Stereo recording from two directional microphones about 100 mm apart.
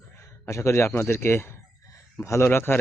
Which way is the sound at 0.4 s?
30° left (ahead or behind).